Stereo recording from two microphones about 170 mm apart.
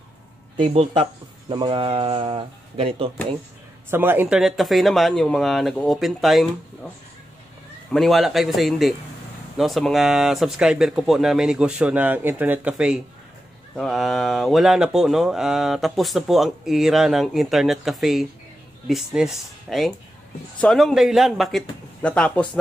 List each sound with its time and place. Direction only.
1.5 s speech: 30° right (ahead or behind)
3.9 s speech: 10° right (ahead or behind)
7.9 s speech: centre (ahead or behind)